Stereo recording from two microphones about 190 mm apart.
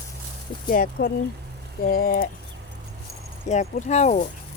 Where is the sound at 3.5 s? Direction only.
40° left (ahead or behind).